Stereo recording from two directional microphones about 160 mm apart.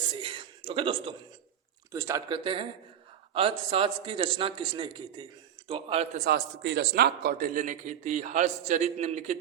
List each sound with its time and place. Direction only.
0.0 s a sound: 30° right (ahead or behind)
1.9 s speech: 20° right (ahead or behind)
2.3 s a man's voice: 35° right (ahead or behind)
6.1 s a man's voice: 75° right (ahead or behind); by 9.4 s 50° right (ahead or behind)